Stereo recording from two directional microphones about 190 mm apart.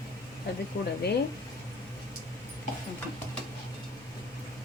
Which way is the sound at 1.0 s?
60° left (ahead or behind).